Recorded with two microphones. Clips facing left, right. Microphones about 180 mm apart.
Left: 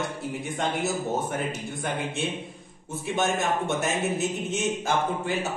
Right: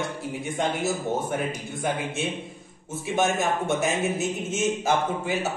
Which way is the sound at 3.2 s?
Centre (ahead or behind).